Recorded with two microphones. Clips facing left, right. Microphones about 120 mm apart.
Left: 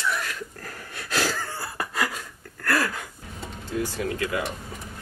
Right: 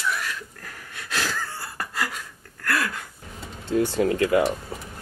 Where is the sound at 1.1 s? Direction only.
40° left (ahead or behind).